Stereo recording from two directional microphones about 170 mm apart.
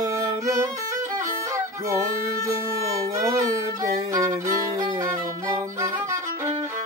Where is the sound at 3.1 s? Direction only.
20° right (ahead or behind).